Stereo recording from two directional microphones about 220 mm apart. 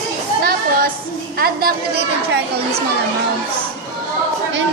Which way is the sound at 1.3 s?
45° right (ahead or behind).